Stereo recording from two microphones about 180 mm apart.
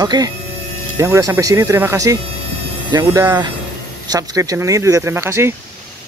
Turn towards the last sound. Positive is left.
turn(degrees=-15)  # may be behind; listen again after turning